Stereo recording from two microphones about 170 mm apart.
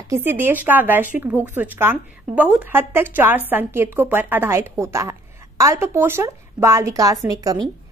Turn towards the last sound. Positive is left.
turn(degrees=-20)  # may be behind; listen again after turning